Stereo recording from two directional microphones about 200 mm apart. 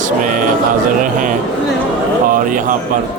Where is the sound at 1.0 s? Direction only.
40° right (ahead or behind).